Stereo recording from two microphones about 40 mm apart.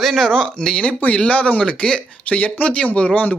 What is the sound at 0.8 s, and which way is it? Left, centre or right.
Speech, left.